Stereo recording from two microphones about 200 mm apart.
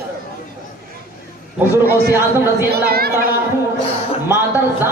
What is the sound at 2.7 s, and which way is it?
Speech, 50° right (ahead or behind).